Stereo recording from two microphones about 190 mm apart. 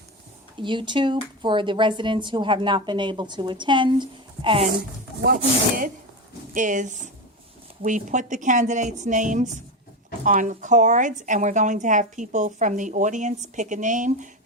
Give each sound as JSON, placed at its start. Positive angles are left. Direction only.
{"t": 0.5, "sound": "speech", "side_deg": -25}
{"t": 5.2, "sound": "a woman's voice", "side_deg": -50}